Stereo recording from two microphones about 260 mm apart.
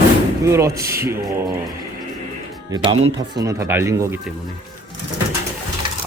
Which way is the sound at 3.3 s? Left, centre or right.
Centre.